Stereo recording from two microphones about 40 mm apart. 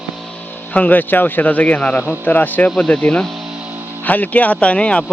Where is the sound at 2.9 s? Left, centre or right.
Left.